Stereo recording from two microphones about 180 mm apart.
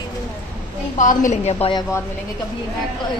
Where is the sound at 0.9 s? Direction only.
45° left (ahead or behind).